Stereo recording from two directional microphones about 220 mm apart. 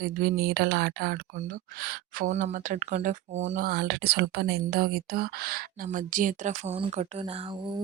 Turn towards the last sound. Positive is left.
turn(degrees=-25)  # may be behind; listen again after turning